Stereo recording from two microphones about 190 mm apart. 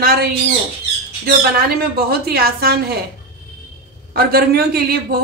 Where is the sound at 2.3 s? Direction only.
55° right (ahead or behind).